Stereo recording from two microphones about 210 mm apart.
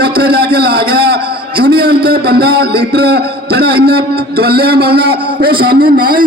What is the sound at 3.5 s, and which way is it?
A man's voice, 50° right (ahead or behind).